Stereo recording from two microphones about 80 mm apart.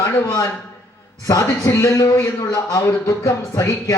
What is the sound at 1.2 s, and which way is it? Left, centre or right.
A man's voice, left.